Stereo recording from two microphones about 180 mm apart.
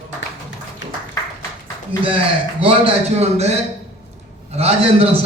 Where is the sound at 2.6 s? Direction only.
30° right (ahead or behind).